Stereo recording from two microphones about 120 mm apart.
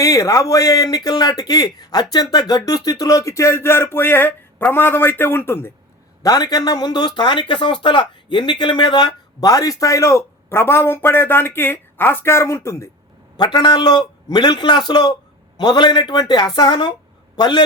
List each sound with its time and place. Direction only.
0.0 s speech: 30° left (ahead or behind)
6.2 s speech: 35° left (ahead or behind)
13.3 s a man's voice: 40° left (ahead or behind)